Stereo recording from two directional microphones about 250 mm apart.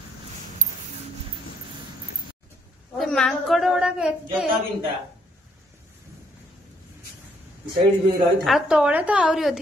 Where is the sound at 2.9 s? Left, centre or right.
Centre.